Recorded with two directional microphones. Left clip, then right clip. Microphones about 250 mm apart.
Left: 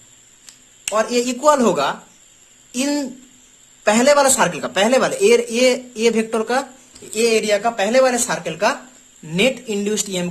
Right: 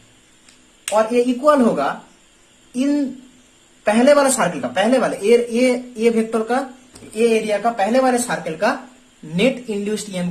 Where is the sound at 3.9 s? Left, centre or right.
Left.